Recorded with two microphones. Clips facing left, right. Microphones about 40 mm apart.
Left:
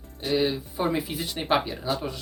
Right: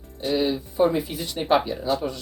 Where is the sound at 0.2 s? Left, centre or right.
Centre.